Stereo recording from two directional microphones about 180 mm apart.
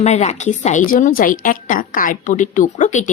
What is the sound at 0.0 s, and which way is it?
A woman's voice, 40° left (ahead or behind).